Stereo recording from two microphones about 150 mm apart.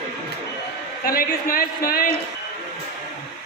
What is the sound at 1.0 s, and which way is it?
A man's voice, 75° left (ahead or behind).